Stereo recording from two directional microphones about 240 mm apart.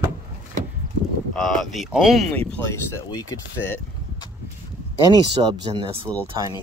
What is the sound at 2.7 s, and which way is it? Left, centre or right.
Speech, centre.